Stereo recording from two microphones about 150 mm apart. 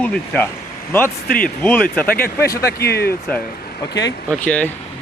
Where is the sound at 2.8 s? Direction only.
90° left.